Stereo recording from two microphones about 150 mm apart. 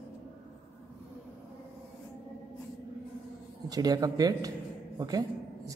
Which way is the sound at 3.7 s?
25° right (ahead or behind).